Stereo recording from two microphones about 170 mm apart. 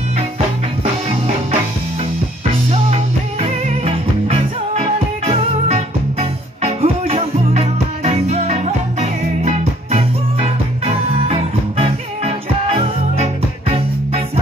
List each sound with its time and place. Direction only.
3.3 s music: 35° right (ahead or behind)